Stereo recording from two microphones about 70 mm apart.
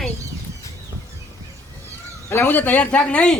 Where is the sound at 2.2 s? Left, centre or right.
Left; by 3.3 s centre.